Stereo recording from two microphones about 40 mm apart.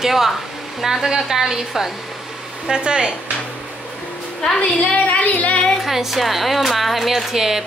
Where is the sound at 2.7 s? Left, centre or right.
Right.